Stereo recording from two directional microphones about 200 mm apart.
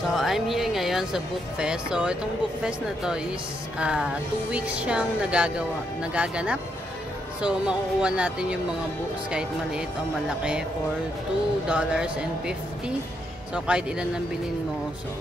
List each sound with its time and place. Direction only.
0.1 s speech: centre (ahead or behind)
11.7 s speech: 5° right (ahead or behind)